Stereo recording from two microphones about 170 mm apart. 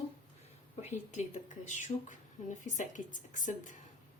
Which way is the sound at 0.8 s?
45° left (ahead or behind).